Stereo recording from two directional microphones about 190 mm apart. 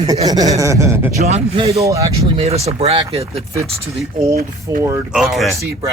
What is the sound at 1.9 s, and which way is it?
Speech, 15° right (ahead or behind).